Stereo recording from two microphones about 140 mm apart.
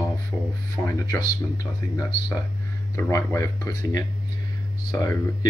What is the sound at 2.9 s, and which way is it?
Speech, 20° left (ahead or behind).